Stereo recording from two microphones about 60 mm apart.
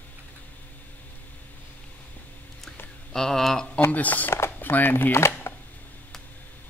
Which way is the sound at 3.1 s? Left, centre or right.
Centre.